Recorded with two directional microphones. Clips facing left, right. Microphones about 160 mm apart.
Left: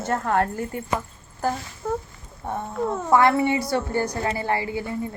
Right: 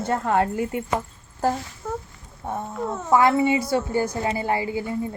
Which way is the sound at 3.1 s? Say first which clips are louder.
Right 1 dB; 15° right (ahead or behind).